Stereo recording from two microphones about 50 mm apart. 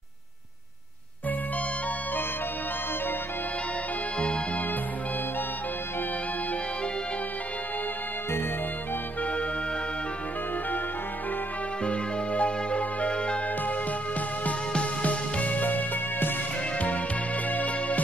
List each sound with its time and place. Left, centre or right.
11.8 s music: left
14.7 s music: left